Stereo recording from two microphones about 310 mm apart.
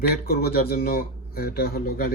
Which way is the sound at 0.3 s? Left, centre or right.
Left.